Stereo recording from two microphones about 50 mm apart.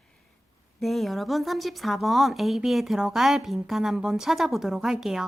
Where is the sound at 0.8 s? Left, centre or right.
Centre.